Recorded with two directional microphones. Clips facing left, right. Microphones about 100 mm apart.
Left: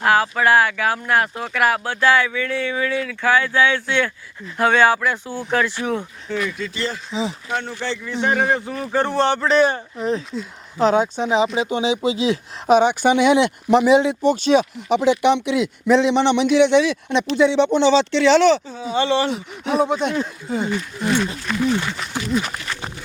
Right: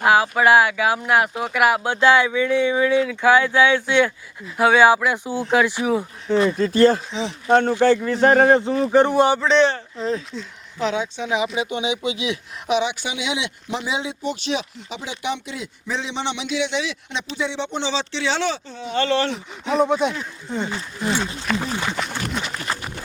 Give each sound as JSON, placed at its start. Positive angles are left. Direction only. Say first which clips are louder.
{"t": 0.0, "sound": "speech", "louder": "right 1 dB", "side_deg": -15}
{"t": 6.2, "sound": "speech", "louder": "right 10 dB", "side_deg": -30}
{"t": 7.1, "sound": "a man's voice", "louder": "left 2 dB", "side_deg": 5}
{"t": 7.4, "sound": "speech", "louder": "right 10 dB", "side_deg": -45}
{"t": 8.4, "sound": "speech", "louder": "right 6 dB", "side_deg": -25}
{"t": 9.4, "sound": "a man's voice", "louder": "even", "side_deg": 5}
{"t": 9.7, "sound": "speech", "louder": "left 2 dB", "side_deg": 20}
{"t": 10.8, "sound": "speech", "louder": "left 6 dB", "side_deg": 40}
{"t": 14.2, "sound": "speech", "louder": "left 9 dB", "side_deg": 45}
{"t": 14.8, "sound": "a man's voice", "louder": "left 14 dB", "side_deg": 60}
{"t": 17.7, "sound": "speech", "louder": "left 10 dB", "side_deg": 60}
{"t": 18.7, "sound": "speech", "louder": "left 2 dB", "side_deg": 10}
{"t": 21.5, "sound": "speech", "louder": "left 5 dB", "side_deg": -30}